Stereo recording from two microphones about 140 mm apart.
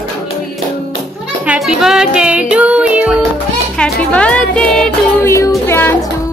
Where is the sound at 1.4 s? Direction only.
5° right (ahead or behind).